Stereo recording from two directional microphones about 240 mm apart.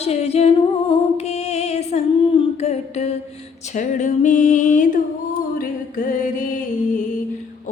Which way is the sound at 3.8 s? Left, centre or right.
Left.